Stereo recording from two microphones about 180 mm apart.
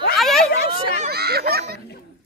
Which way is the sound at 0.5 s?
60° left (ahead or behind).